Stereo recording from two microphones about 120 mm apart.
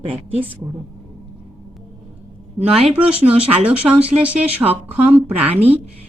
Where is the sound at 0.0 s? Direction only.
50° right (ahead or behind).